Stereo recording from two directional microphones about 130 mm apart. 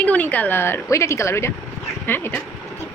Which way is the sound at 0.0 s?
10° left (ahead or behind).